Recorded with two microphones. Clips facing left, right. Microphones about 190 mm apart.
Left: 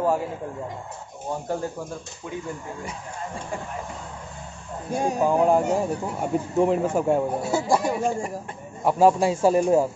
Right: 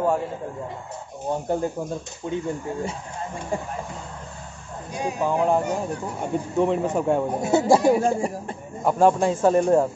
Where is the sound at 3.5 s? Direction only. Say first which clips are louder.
Right 6 dB; 25° right (ahead or behind).